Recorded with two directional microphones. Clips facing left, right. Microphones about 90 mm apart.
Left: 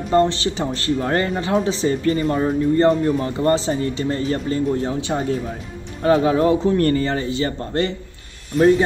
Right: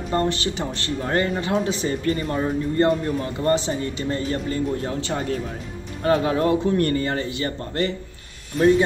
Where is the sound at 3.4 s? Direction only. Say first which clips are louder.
Left 2 dB; 30° left (ahead or behind).